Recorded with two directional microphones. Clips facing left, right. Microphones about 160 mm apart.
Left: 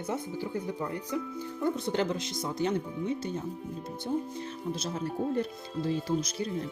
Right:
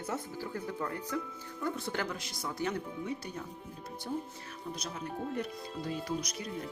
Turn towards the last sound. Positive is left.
turn(degrees=30)  # may be behind; listen again after turning